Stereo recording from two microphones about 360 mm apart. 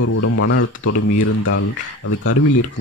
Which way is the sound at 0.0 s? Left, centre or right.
Left.